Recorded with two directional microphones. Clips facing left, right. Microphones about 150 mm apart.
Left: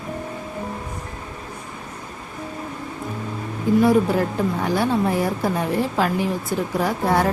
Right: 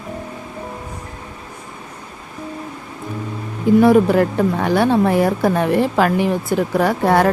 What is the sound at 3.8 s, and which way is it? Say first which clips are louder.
A woman's voice: right 5 dB; 70° right (ahead or behind).